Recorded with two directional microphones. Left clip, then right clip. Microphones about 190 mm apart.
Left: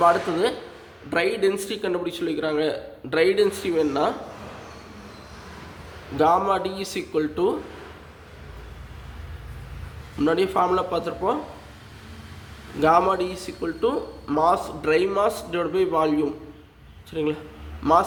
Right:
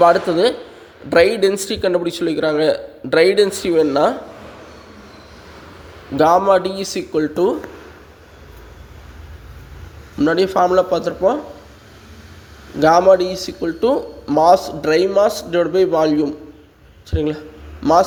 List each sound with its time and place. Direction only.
0.0 s a man's voice: 25° right (ahead or behind)
6.1 s a man's voice: 35° right (ahead or behind)
10.2 s a man's voice: 30° right (ahead or behind)
12.8 s a man's voice: 30° right (ahead or behind)